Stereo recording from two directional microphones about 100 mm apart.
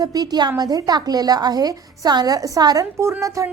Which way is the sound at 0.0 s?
40° right (ahead or behind).